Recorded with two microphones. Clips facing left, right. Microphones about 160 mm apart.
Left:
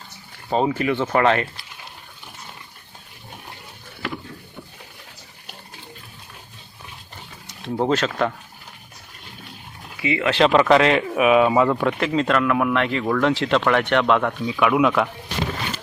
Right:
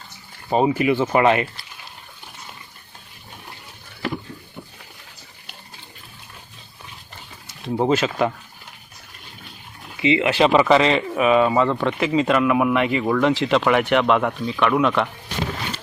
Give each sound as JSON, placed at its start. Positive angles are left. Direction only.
{"t": 0.5, "sound": "speech", "side_deg": -10}
{"t": 7.4, "sound": "speech", "side_deg": -5}
{"t": 10.0, "sound": "speech", "side_deg": -20}
{"t": 10.3, "sound": "speech", "side_deg": -5}
{"t": 11.9, "sound": "speech", "side_deg": -5}